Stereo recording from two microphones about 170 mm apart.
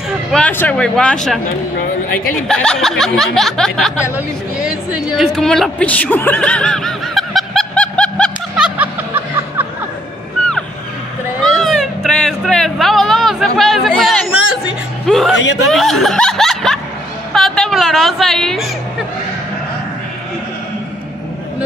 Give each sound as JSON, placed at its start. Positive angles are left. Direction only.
{"t": 0.3, "sound": "speech", "side_deg": 10}
{"t": 2.4, "sound": "a woman's voice", "side_deg": 5}
{"t": 8.5, "sound": "music", "side_deg": -5}
{"t": 11.4, "sound": "a sound", "side_deg": 0}
{"t": 15.0, "sound": "speech", "side_deg": 0}
{"t": 15.3, "sound": "a man's voice", "side_deg": 90}
{"t": 15.7, "sound": "a woman's voice", "side_deg": 0}